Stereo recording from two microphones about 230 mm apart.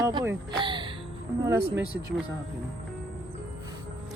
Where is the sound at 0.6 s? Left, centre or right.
Right.